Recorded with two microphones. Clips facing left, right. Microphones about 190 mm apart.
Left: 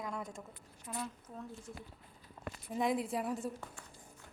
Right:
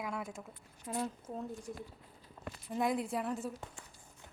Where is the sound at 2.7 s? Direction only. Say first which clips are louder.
Even; centre (ahead or behind).